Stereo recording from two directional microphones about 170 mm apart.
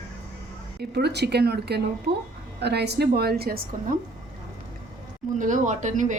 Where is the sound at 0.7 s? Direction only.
75° right (ahead or behind).